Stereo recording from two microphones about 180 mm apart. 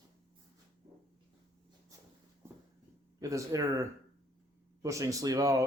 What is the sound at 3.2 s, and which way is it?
A man's voice, 20° right (ahead or behind).